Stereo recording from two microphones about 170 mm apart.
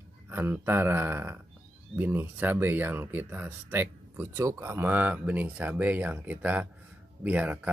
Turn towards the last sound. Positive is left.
turn(degrees=-10)  # may be behind; listen again after turning